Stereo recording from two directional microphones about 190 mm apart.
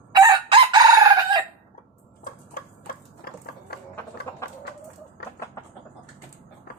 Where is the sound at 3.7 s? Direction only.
55° left (ahead or behind).